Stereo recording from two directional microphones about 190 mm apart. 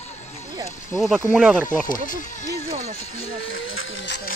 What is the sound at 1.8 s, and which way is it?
Speech, 45° left (ahead or behind).